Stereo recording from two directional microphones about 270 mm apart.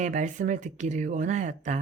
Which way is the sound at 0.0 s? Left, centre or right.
Right.